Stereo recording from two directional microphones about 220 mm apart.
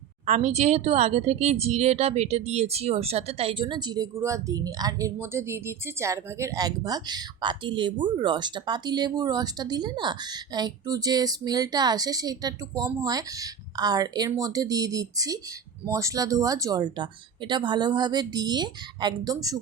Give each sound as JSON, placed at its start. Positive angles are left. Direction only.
{"t": 0.3, "sound": "speech", "side_deg": -30}